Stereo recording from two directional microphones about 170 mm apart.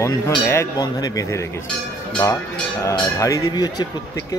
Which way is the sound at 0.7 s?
25° left (ahead or behind).